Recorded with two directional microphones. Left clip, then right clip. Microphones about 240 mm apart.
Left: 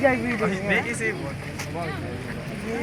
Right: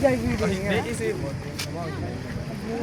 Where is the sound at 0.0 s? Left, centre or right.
Centre.